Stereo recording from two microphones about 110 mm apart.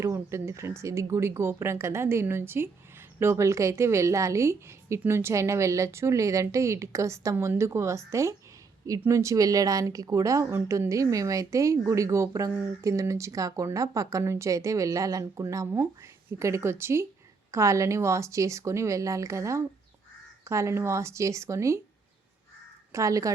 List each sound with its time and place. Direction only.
0.0 s a woman's voice: 25° right (ahead or behind)
22.9 s a woman's voice: 30° right (ahead or behind)